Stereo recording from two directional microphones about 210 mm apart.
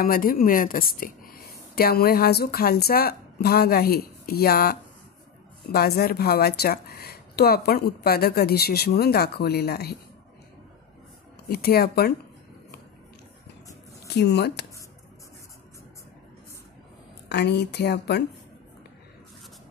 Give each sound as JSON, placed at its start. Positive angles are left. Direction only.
{"t": 0.0, "sound": "speech", "side_deg": 45}
{"t": 11.4, "sound": "speech", "side_deg": 45}
{"t": 14.0, "sound": "speech", "side_deg": 55}
{"t": 17.3, "sound": "speech", "side_deg": 55}